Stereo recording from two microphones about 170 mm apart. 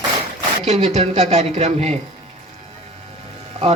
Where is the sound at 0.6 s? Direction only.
40° right (ahead or behind).